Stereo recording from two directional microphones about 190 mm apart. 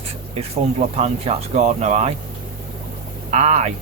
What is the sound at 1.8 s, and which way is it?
Speech, 35° right (ahead or behind).